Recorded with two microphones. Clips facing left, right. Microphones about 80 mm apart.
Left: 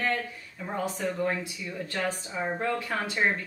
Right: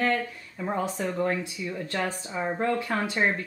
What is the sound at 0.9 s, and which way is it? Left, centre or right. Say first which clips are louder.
Speech: right 2 dB; right.